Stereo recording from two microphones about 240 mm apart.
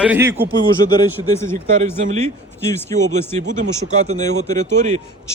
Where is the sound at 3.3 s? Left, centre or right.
Right.